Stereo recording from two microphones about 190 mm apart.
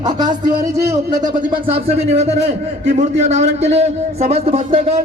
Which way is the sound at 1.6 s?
30° right (ahead or behind).